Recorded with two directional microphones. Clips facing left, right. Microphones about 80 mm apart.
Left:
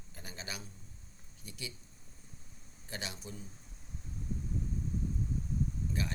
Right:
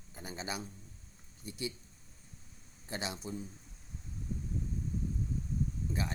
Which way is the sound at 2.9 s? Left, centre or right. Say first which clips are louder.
Right 4 dB; right.